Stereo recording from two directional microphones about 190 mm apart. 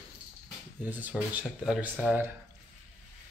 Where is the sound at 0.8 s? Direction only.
10° right (ahead or behind).